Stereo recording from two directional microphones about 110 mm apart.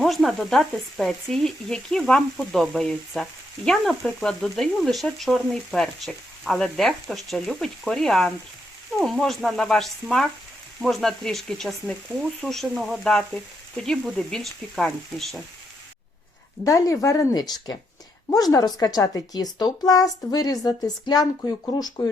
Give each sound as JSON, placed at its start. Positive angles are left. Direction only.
{"t": 0.0, "sound": "frying", "side_deg": 0}
{"t": 16.6, "sound": "speech", "side_deg": 30}
{"t": 17.3, "sound": "a woman's voice", "side_deg": 35}